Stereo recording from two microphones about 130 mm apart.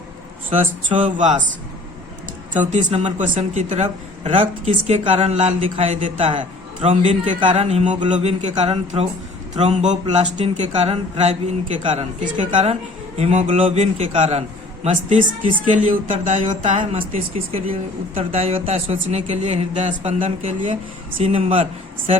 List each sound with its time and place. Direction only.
0.6 s speech: 75° right (ahead or behind)
2.5 s speech: 70° right (ahead or behind)
4.2 s speech: 55° right (ahead or behind)
5.5 s speech: 45° right (ahead or behind)
6.8 s speech: 60° right (ahead or behind)
13.7 s speech: 55° right (ahead or behind)
14.8 s speech: 75° right (ahead or behind)
16.6 s speech: 65° right (ahead or behind); by 18.9 s 50° right (ahead or behind)
19.0 s speech: 65° right (ahead or behind)
21.2 s speech: 45° right (ahead or behind)